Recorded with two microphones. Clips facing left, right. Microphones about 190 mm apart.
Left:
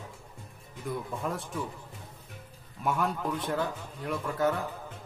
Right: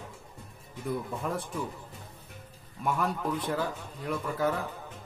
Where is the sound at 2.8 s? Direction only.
Centre (ahead or behind).